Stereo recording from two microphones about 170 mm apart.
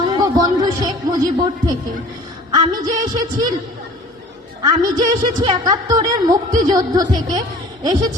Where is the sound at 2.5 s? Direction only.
25° right (ahead or behind).